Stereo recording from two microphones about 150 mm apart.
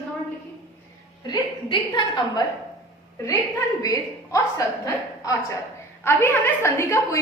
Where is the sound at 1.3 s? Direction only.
30° left (ahead or behind).